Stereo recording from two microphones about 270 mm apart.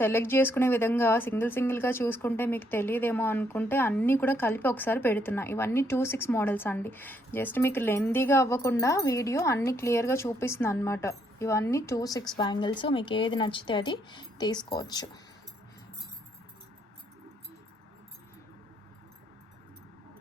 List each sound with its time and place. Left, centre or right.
0.0 s speech: centre